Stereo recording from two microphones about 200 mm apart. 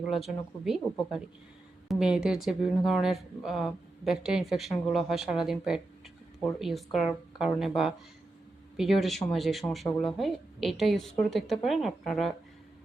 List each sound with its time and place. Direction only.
0.1 s speech: centre (ahead or behind)
8.7 s speech: centre (ahead or behind)